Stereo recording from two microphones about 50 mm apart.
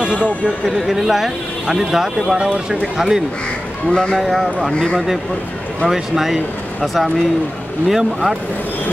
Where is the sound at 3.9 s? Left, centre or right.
Centre.